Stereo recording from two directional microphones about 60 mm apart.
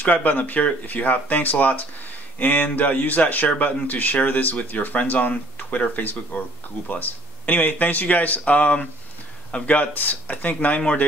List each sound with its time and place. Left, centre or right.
0.0 s a man's voice: left